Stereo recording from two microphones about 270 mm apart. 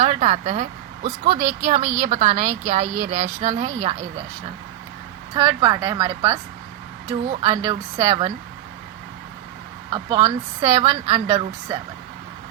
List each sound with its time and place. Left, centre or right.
0.0 s a woman's voice: right
5.3 s a woman's voice: centre
9.9 s a woman's voice: centre